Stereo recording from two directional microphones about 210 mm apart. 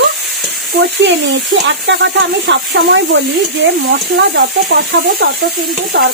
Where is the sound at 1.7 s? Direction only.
60° right (ahead or behind).